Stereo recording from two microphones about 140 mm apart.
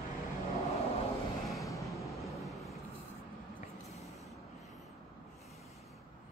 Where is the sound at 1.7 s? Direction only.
20° left (ahead or behind).